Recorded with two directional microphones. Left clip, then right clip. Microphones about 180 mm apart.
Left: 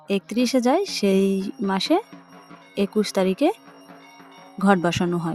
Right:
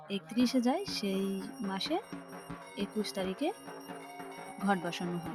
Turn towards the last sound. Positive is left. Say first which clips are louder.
# left 13 dB
turn(degrees=50)  # may be behind; listen again after turning